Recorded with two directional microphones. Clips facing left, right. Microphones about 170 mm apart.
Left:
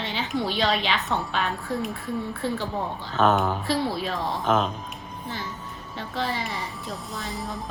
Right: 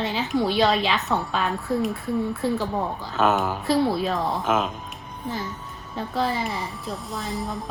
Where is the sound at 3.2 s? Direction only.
5° right (ahead or behind).